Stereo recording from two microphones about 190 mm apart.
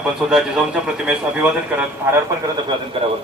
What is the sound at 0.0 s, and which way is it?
A man's voice, 5° right (ahead or behind).